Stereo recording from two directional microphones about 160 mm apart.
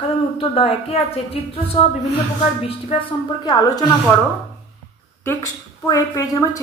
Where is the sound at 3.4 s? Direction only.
25° left (ahead or behind).